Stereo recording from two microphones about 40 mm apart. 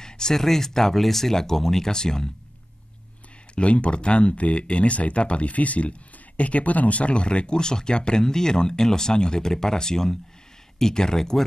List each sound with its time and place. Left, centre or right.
0.0 s speech: centre
3.5 s speech: left; by 11.4 s centre